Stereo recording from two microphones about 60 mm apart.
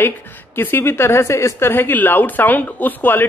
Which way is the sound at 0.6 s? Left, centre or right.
Left.